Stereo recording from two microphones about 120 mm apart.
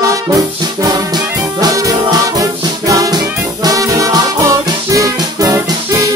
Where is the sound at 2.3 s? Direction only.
30° right (ahead or behind).